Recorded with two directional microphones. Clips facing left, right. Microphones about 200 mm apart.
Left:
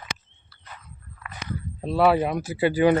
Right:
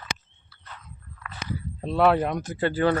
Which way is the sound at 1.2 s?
5° left (ahead or behind).